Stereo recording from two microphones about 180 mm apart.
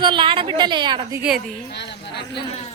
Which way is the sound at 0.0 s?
25° right (ahead or behind).